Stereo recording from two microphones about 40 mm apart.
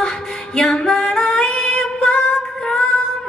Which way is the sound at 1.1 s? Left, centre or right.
Left.